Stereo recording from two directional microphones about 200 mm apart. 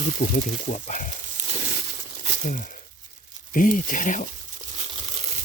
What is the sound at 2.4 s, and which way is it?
Speech, 40° left (ahead or behind).